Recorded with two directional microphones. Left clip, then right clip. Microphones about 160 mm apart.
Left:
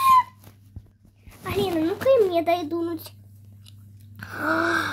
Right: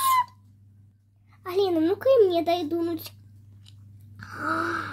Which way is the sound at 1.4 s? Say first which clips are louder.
Right 1 dB; 5° right (ahead or behind).